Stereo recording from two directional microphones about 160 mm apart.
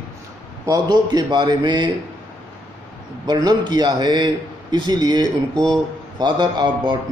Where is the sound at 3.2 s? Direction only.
25° right (ahead or behind).